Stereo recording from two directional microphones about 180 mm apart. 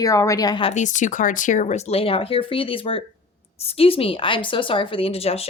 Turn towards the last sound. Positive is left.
turn(degrees=35)  # may be behind; listen again after turning